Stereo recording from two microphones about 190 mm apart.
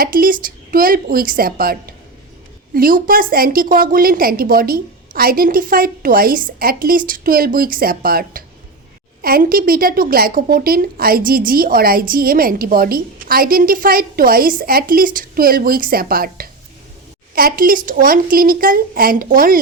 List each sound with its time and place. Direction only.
0.0 s a woman's voice: 50° right (ahead or behind)